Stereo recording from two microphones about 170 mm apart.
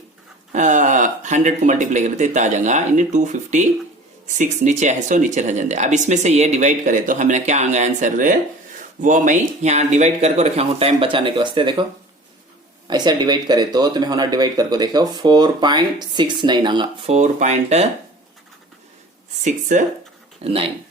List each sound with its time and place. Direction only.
0.5 s speech: 45° right (ahead or behind); by 11.7 s 30° right (ahead or behind)
12.9 s speech: 25° right (ahead or behind)
17.1 s speech: 40° right (ahead or behind)
19.5 s speech: 45° right (ahead or behind)
20.4 s speech: 35° right (ahead or behind)